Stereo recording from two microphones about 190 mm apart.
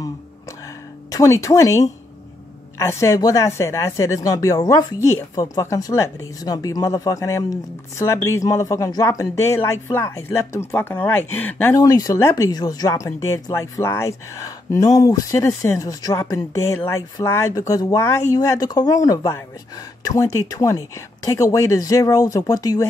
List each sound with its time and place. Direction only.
1.1 s speech: 15° left (ahead or behind)